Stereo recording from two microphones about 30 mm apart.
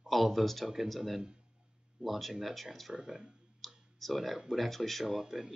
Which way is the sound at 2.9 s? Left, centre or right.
Right.